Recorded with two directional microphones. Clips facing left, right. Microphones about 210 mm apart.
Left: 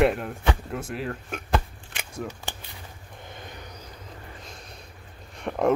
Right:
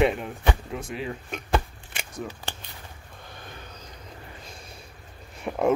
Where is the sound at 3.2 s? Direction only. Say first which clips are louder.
Left 2 dB; 20° left (ahead or behind).